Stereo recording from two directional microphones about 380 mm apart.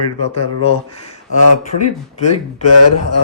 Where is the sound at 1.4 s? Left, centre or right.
Left.